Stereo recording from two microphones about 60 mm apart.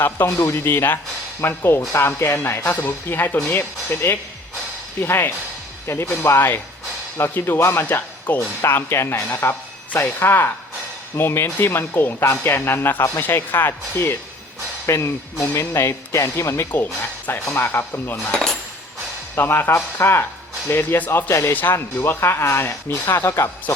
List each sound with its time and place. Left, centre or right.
0.3 s speech: left
8.3 s speech: left
8.6 s speech: left
16.7 s speech: left
17.4 s speech: left
18.3 s cutlery: centre
19.4 s speech: left
21.5 s speech: left